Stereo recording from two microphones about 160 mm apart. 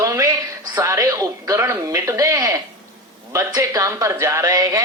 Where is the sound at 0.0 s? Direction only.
20° right (ahead or behind).